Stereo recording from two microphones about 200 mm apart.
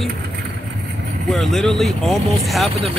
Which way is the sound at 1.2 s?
Centre (ahead or behind).